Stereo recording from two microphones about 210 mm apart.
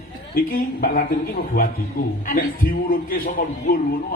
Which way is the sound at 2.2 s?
45° left (ahead or behind).